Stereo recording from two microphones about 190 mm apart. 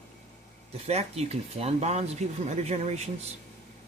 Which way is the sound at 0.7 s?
35° right (ahead or behind).